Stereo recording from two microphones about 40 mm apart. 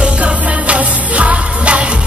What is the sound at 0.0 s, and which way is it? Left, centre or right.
Music, right.